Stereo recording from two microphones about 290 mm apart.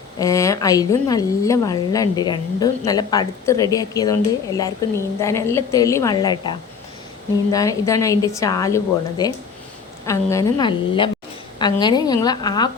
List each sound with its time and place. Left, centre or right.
0.2 s a woman's voice: centre